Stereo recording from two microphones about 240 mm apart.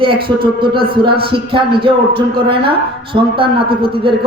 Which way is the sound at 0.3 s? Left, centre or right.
Centre.